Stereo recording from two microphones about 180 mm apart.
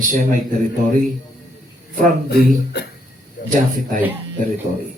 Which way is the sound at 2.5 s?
65° left (ahead or behind).